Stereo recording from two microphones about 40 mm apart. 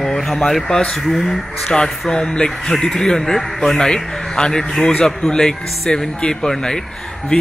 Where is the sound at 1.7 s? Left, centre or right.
Centre.